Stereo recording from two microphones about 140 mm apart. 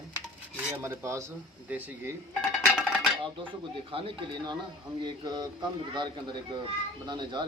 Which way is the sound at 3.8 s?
40° right (ahead or behind).